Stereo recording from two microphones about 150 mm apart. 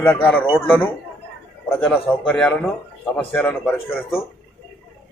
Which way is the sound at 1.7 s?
10° left (ahead or behind).